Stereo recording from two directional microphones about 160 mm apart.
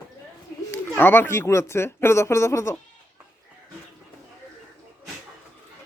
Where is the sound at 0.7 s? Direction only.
15° left (ahead or behind).